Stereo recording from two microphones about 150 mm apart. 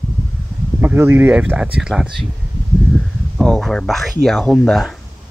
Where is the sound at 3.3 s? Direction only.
Centre (ahead or behind).